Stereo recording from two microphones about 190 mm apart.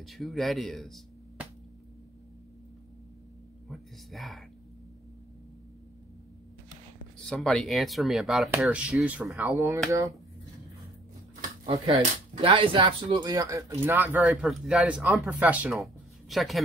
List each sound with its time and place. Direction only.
0.0 s speech: centre (ahead or behind)
3.6 s speech: centre (ahead or behind)
7.2 s speech: centre (ahead or behind); by 10.1 s 15° right (ahead or behind)
11.6 s speech: 30° right (ahead or behind); by 16.6 s centre (ahead or behind)